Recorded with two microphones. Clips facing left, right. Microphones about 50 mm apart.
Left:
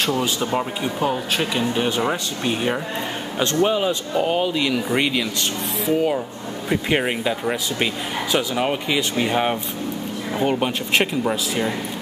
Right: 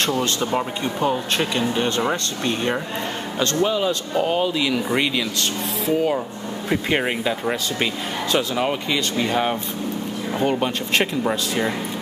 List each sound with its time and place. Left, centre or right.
0.0 s speech: centre
3.6 s speech: left
4.1 s speech: centre
11.2 s speech: centre